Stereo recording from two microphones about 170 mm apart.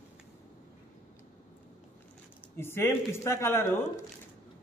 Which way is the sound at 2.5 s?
15° left (ahead or behind).